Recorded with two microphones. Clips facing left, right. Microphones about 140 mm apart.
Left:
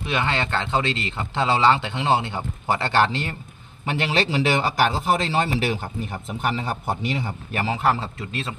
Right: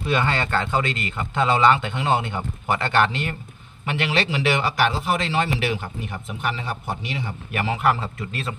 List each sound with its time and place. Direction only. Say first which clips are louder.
0.0 s a man's voice: right 2 dB; 20° left (ahead or behind)